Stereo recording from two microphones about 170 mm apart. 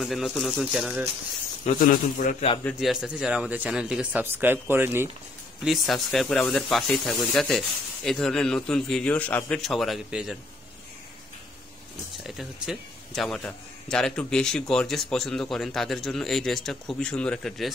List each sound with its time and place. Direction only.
0.0 s a man's voice: centre (ahead or behind)
1.8 s a man's voice: 50° left (ahead or behind)
2.6 s speech: centre (ahead or behind)
5.6 s a man's voice: centre (ahead or behind)
12.2 s a man's voice: centre (ahead or behind)